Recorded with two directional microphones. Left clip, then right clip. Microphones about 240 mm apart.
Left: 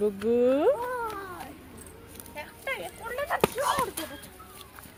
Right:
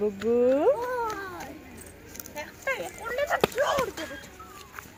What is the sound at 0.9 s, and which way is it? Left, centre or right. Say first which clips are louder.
Cat: right 3 dB; right.